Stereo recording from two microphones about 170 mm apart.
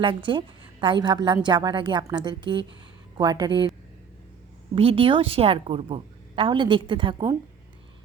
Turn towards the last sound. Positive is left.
turn(degrees=-30)  # may be behind; listen again after turning